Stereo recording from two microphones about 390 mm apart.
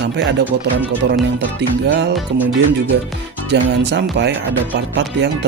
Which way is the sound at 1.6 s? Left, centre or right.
Right.